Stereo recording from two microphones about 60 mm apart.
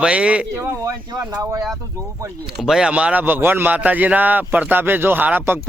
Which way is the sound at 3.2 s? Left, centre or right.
Right.